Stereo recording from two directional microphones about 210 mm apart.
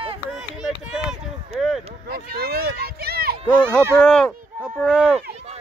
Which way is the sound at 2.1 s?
45° right (ahead or behind).